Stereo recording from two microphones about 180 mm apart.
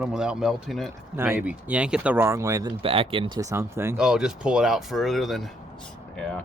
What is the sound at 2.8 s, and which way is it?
Speech, 30° right (ahead or behind).